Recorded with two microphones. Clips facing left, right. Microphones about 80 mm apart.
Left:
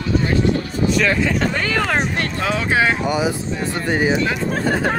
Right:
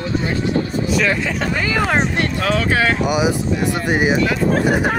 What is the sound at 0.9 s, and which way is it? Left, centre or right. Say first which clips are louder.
Speech: left 2 dB; centre.